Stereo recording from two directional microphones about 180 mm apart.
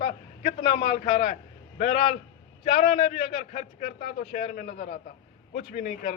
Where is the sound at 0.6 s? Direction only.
30° left (ahead or behind).